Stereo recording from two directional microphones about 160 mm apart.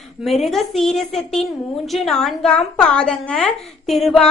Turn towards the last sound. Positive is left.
turn(degrees=0)  # may be behind; listen again after turning